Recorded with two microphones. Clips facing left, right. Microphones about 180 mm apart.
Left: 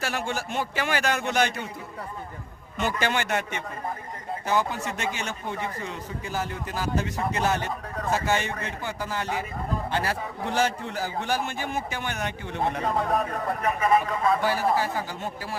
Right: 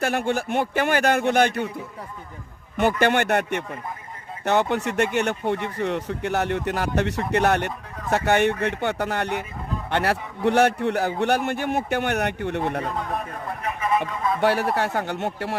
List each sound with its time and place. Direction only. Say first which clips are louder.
0.0 s a man's voice: right 6 dB; 55° right (ahead or behind)
3.0 s a man's voice: right 5 dB; 60° right (ahead or behind)
13.1 s speech: left 4 dB; 35° left (ahead or behind)
14.4 s speech: right 3 dB; 70° right (ahead or behind)